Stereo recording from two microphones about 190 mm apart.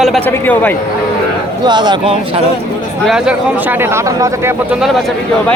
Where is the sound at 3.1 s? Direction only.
5° right (ahead or behind).